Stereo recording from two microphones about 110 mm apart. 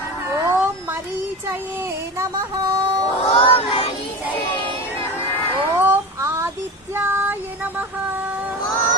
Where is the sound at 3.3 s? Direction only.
65° left (ahead or behind).